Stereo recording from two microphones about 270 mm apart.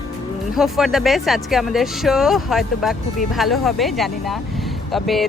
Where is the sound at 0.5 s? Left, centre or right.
Centre.